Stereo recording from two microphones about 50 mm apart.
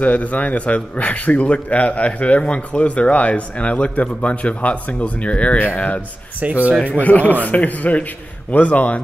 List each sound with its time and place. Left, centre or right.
0.0 s a man's voice: left
6.4 s speech: right
6.8 s a man's voice: left